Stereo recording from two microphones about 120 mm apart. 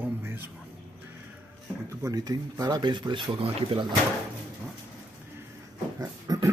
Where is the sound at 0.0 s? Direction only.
15° right (ahead or behind).